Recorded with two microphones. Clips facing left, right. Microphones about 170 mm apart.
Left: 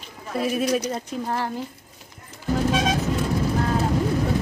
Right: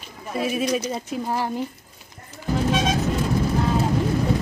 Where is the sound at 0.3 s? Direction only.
Centre (ahead or behind).